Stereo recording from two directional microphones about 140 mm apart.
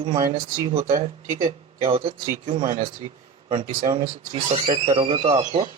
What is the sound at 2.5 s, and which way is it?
Speech, 65° right (ahead or behind).